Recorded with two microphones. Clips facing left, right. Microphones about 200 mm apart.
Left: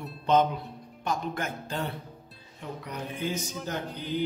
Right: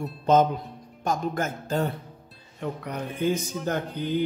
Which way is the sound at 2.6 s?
60° right (ahead or behind).